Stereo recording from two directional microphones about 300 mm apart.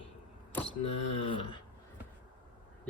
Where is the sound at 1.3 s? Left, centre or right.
Centre.